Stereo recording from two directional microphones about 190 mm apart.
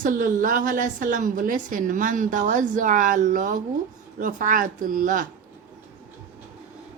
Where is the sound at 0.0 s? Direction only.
45° right (ahead or behind).